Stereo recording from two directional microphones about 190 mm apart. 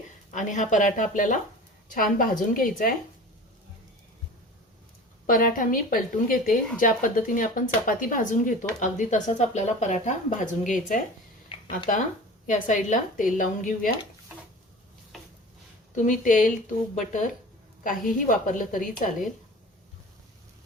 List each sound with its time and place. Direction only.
0.3 s speech: 40° left (ahead or behind)
5.2 s speech: 50° left (ahead or behind)
11.5 s a sound: 25° left (ahead or behind)
12.5 s speech: 40° left (ahead or behind)
15.1 s a sound: centre (ahead or behind)
16.0 s speech: 40° left (ahead or behind)